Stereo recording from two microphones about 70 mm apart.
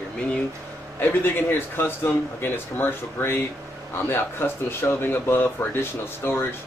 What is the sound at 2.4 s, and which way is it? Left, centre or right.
Speech, left.